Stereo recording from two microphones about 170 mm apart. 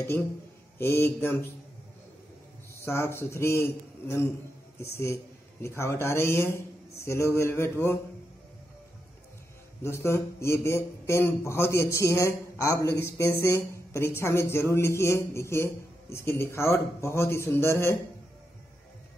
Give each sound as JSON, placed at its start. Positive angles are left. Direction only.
{"t": 0.7, "sound": "speech", "side_deg": 15}
{"t": 2.8, "sound": "speech", "side_deg": 15}
{"t": 9.8, "sound": "speech", "side_deg": 15}